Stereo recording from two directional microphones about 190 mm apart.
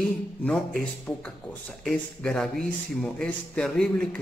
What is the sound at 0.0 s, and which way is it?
A man's voice, 5° left (ahead or behind).